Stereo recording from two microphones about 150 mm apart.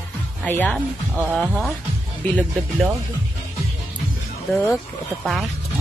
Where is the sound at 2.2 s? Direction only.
10° left (ahead or behind).